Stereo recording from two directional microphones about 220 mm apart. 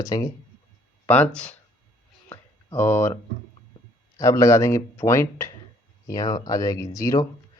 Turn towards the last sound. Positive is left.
turn(degrees=15)  # may be behind; listen again after turning